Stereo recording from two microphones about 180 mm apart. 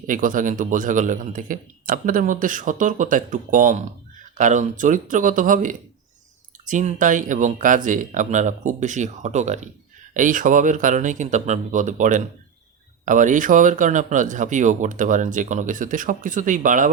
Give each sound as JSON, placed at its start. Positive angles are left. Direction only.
{"t": 0.0, "sound": "speech", "side_deg": -50}